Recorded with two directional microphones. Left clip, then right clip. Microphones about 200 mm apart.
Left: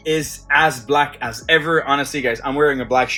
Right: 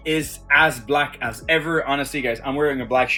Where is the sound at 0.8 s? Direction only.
10° right (ahead or behind).